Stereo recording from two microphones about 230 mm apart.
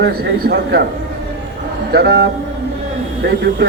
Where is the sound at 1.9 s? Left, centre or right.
Right.